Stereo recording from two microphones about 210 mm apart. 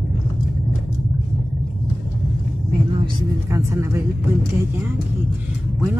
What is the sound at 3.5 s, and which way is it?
Speech, 15° right (ahead or behind).